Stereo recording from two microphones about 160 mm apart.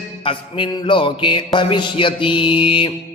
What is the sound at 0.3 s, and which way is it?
Mantra, 30° left (ahead or behind).